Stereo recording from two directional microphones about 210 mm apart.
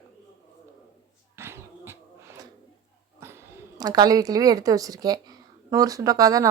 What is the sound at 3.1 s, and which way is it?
A woman's voice, 10° right (ahead or behind).